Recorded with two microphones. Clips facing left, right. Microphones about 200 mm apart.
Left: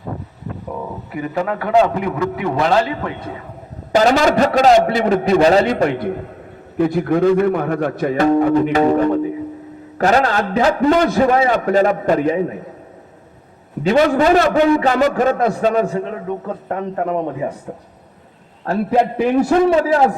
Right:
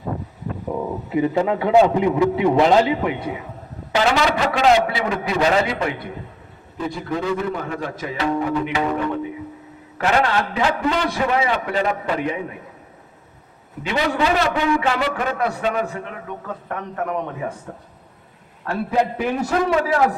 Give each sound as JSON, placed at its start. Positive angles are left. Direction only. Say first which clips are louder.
{"t": 1.1, "sound": "a man's voice", "louder": "right 3 dB", "side_deg": -20}
{"t": 3.9, "sound": "a man's voice", "louder": "left 6 dB", "side_deg": 45}
{"t": 6.7, "sound": "a man's voice", "louder": "left 10 dB", "side_deg": 60}
{"t": 13.8, "sound": "a man's voice", "louder": "left 7 dB", "side_deg": 45}
{"t": 18.6, "sound": "a man's voice", "louder": "left 5 dB", "side_deg": 35}